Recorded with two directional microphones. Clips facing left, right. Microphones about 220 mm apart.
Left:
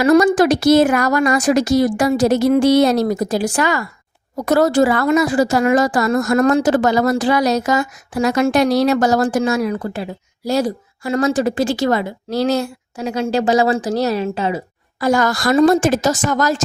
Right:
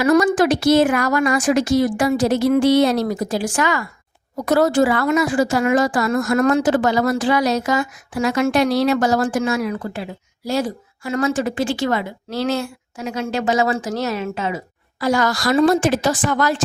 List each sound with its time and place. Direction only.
0.0 s a woman's voice: 35° left (ahead or behind)
15.0 s a woman's voice: 50° left (ahead or behind)